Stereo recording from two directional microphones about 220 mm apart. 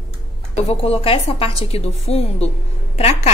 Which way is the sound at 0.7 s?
25° left (ahead or behind).